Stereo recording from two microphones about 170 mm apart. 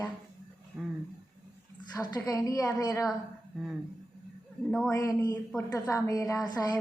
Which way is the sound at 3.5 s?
Centre (ahead or behind).